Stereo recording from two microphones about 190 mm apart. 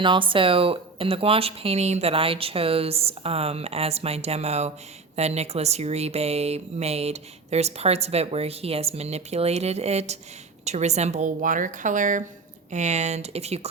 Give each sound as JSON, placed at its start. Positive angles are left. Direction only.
{"t": 0.0, "sound": "speech", "side_deg": -25}